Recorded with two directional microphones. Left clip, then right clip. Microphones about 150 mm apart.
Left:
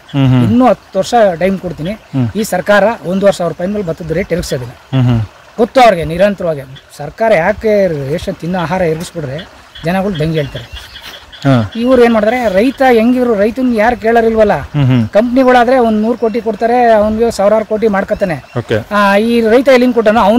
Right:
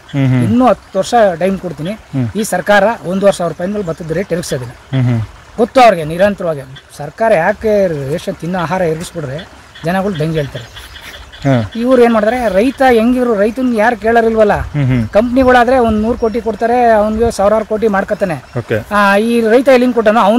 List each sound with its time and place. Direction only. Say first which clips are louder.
0.1 s speech: left 3 dB; 20° left (ahead or behind)
0.5 s speech: even; 10° left (ahead or behind)
4.9 s speech: left 3 dB; 25° left (ahead or behind)
5.6 s speech: even; 10° left (ahead or behind)
11.8 s speech: left 1 dB; 10° left (ahead or behind)
12.5 s speech: even; 10° left (ahead or behind)
14.8 s speech: left 3 dB; 25° left (ahead or behind)
15.1 s speech: even; 5° left (ahead or behind)